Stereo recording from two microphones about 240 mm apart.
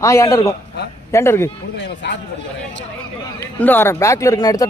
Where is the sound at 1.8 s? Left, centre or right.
Left.